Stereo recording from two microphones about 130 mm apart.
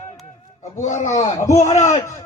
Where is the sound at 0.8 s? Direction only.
65° left (ahead or behind).